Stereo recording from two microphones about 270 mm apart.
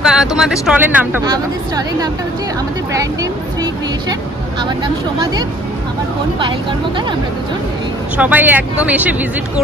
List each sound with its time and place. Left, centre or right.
0.0 s speech: centre
8.2 s speech: centre